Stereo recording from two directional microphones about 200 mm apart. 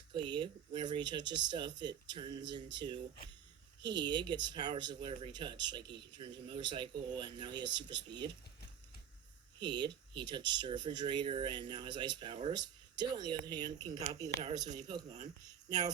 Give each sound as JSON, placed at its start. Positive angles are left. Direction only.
{"t": 0.1, "sound": "speech", "side_deg": -25}
{"t": 7.6, "sound": "speech", "side_deg": -60}
{"t": 9.6, "sound": "speech", "side_deg": -20}